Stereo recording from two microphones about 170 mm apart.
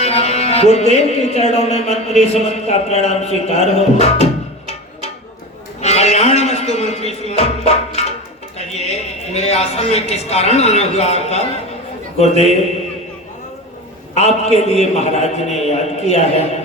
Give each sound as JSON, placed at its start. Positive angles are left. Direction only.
{"t": 0.0, "sound": "music", "side_deg": 40}
{"t": 5.8, "sound": "a man's voice", "side_deg": 40}
{"t": 14.2, "sound": "a man's voice", "side_deg": 40}